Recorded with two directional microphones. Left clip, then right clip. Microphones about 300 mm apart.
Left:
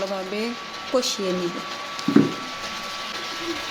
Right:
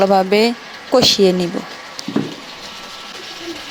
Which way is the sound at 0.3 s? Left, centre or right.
Right.